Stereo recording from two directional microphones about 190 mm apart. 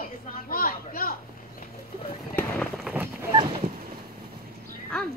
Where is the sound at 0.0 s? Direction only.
50° left (ahead or behind).